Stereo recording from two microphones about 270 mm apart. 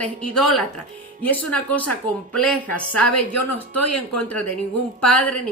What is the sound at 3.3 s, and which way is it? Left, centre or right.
Speech, left.